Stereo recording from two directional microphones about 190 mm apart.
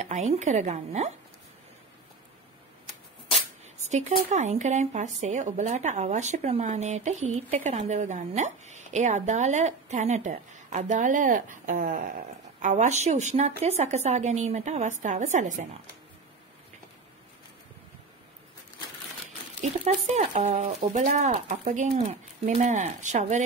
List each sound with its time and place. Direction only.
0.3 s a woman's voice: 40° right (ahead or behind)
3.8 s a woman's voice: 40° right (ahead or behind)
20.2 s a woman's voice: 40° right (ahead or behind)